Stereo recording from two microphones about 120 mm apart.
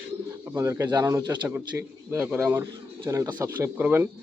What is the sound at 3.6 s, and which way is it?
Speech, 15° right (ahead or behind).